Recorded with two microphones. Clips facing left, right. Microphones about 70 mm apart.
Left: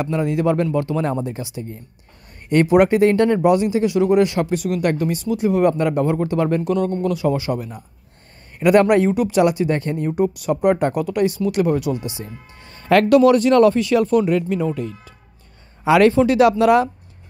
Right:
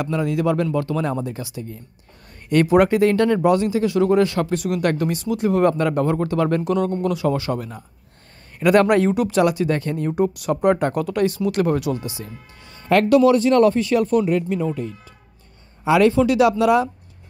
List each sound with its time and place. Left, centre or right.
0.0 s speech: left
2.7 s speech: left
4.6 s speech: centre
6.6 s speech: centre
9.4 s speech: left
10.0 s speech: centre
12.0 s speech: left
12.8 s speech: left
15.8 s a man's voice: left
16.2 s speech: left
16.4 s speech: left